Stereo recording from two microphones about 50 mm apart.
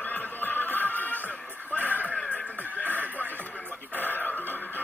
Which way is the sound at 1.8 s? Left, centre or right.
Right.